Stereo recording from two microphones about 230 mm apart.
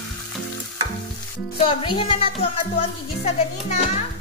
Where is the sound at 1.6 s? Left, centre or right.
Left.